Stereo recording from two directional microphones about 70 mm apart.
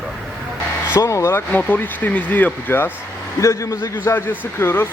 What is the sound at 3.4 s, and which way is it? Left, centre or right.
A man's voice, left.